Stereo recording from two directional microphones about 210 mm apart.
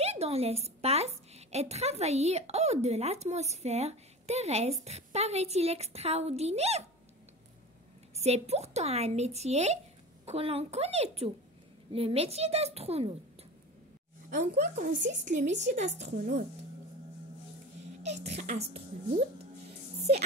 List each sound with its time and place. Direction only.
0.0 s a woman's voice: 30° right (ahead or behind)
8.2 s a woman's voice: 30° right (ahead or behind)
14.3 s a woman's voice: 35° right (ahead or behind)
18.0 s a woman's voice: 30° right (ahead or behind)